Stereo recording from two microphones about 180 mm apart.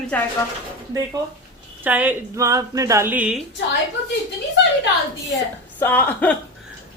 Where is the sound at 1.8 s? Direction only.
10° right (ahead or behind).